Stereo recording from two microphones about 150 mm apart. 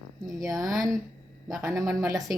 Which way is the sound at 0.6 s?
Centre (ahead or behind).